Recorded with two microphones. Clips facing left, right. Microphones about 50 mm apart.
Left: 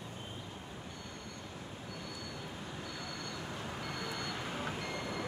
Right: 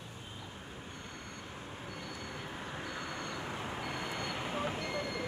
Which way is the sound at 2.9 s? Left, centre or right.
Right.